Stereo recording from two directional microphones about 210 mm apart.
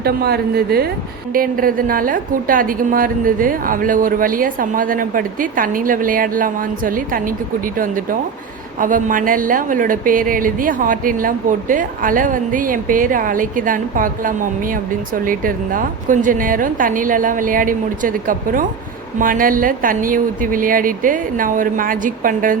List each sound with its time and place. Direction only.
0.0 s a woman's voice: 50° right (ahead or behind)